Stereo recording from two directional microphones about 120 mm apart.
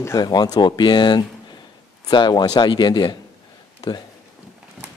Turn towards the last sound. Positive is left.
turn(degrees=35)  # may be behind; listen again after turning